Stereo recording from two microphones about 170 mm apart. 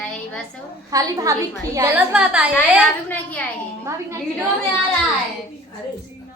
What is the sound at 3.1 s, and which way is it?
Speech, 10° left (ahead or behind).